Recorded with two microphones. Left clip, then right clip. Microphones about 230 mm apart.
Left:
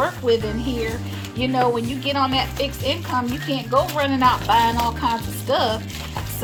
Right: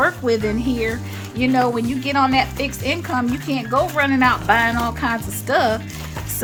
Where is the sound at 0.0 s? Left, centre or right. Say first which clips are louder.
Right 2 dB; right.